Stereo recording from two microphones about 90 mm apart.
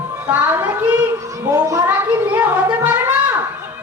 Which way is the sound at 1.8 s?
25° right (ahead or behind).